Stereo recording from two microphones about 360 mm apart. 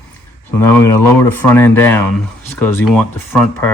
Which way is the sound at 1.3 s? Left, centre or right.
Centre.